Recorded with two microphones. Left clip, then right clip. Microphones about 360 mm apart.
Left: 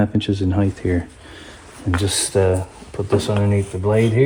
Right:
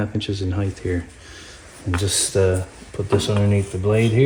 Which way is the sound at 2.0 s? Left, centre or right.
Centre.